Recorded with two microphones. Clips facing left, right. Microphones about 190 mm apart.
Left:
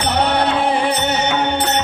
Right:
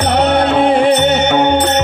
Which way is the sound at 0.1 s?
55° right (ahead or behind).